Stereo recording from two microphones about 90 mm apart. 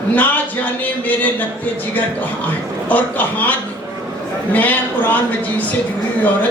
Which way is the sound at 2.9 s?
20° left (ahead or behind).